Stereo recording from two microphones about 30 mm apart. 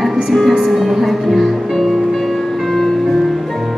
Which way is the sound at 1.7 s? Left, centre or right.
Centre.